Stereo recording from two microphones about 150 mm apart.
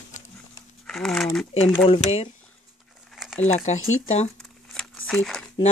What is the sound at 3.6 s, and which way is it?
Speech, 50° left (ahead or behind).